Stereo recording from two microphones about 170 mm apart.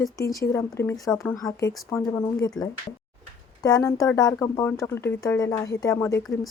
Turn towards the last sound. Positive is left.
turn(degrees=15)  # may be behind; listen again after turning